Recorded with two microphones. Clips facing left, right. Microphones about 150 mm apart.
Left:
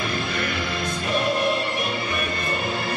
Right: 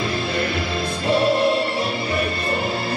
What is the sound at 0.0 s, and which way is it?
Music, 30° right (ahead or behind).